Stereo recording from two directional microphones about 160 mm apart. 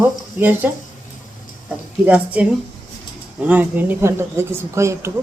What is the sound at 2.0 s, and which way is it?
Speech, 10° right (ahead or behind).